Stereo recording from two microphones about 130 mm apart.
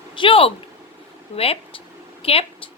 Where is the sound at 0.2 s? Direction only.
45° left (ahead or behind).